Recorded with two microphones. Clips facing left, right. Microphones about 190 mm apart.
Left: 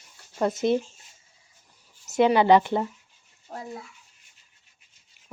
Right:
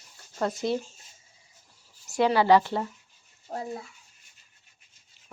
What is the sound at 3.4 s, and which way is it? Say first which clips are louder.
Speech: right 3 dB; 30° right (ahead or behind).